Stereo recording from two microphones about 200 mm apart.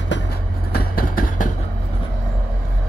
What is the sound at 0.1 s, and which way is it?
Vehicle, 50° left (ahead or behind).